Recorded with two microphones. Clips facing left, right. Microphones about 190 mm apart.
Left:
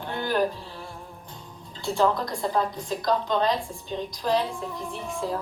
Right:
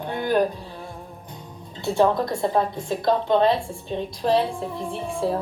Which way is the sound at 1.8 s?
20° right (ahead or behind).